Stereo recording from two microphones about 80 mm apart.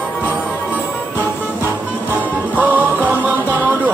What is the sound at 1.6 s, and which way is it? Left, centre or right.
Music, right.